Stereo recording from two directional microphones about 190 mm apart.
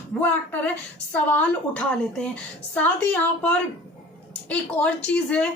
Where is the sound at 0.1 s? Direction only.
5° left (ahead or behind).